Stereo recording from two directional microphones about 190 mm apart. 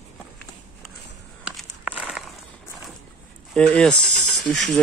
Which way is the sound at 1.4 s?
5° right (ahead or behind).